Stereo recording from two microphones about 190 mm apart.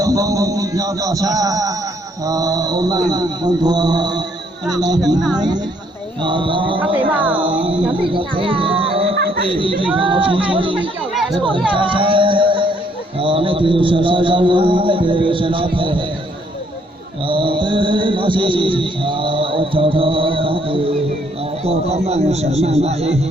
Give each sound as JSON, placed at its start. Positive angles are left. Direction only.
{"t": 0.0, "sound": "music", "side_deg": -20}
{"t": 7.1, "sound": "speech", "side_deg": -10}
{"t": 7.3, "sound": "music", "side_deg": -25}
{"t": 9.1, "sound": "a sound", "side_deg": -55}
{"t": 9.5, "sound": "music", "side_deg": -25}
{"t": 11.1, "sound": "chatter", "side_deg": 0}
{"t": 11.7, "sound": "music", "side_deg": -25}
{"t": 17.2, "sound": "music", "side_deg": -25}
{"t": 21.6, "sound": "a man's voice", "side_deg": -30}